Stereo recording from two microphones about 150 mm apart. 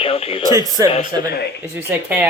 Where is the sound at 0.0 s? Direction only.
40° left (ahead or behind).